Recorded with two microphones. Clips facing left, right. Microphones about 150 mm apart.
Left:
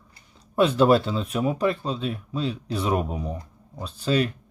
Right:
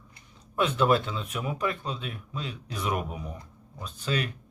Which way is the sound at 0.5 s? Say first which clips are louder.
Left 6 dB; 35° left (ahead or behind).